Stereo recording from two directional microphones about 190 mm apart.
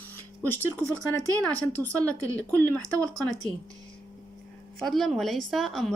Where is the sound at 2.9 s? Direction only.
20° right (ahead or behind).